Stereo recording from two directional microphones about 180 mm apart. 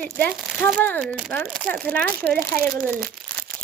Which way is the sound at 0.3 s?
Centre (ahead or behind).